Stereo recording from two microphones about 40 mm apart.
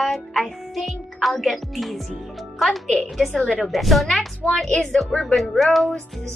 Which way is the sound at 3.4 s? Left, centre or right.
Left.